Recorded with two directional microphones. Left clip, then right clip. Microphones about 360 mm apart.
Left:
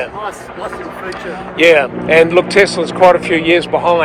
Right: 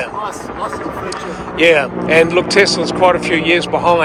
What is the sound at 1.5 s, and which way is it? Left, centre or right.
Speech, centre.